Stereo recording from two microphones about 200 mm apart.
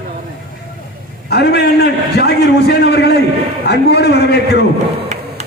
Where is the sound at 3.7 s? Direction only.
55° left (ahead or behind).